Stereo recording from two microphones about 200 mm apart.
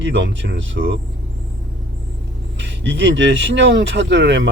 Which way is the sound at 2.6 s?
65° right (ahead or behind).